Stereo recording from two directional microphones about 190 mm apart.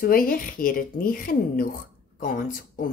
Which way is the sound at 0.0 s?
50° left (ahead or behind).